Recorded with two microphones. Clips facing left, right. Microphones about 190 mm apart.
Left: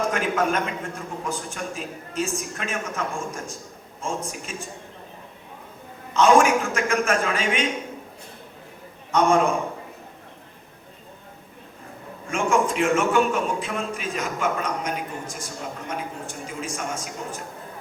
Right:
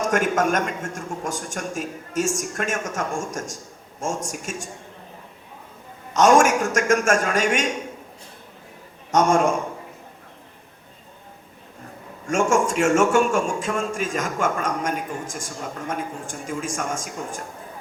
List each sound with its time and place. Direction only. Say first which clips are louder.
0.1 s a man's voice: right 3 dB; 45° right (ahead or behind)
4.5 s a man's voice: right 3 dB; 45° right (ahead or behind)
6.1 s a man's voice: right 1 dB; 45° right (ahead or behind)
9.1 s a man's voice: right 1 dB; 45° right (ahead or behind)
12.3 s a man's voice: right 2 dB; 45° right (ahead or behind)